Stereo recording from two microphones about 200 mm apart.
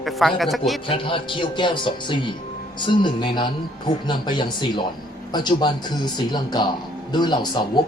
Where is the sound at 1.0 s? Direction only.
25° left (ahead or behind).